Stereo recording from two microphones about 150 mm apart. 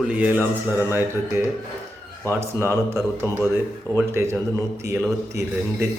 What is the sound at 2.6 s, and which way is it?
A man's voice, 15° right (ahead or behind).